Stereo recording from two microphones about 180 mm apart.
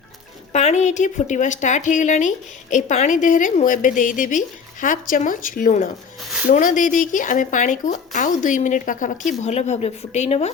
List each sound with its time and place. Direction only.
0.5 s a woman's voice: 40° left (ahead or behind)